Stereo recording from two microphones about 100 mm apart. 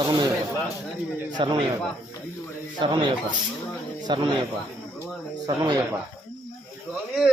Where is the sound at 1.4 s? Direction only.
55° right (ahead or behind).